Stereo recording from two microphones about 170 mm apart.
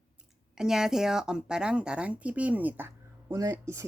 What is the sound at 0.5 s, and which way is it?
A woman's voice, 5° right (ahead or behind).